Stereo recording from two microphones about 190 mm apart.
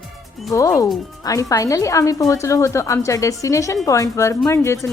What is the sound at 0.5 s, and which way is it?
A woman's voice, 15° left (ahead or behind).